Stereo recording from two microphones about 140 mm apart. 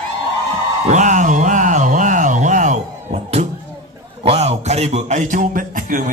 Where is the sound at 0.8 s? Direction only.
60° right (ahead or behind).